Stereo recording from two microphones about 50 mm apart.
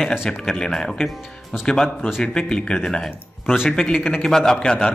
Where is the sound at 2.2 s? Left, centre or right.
Centre.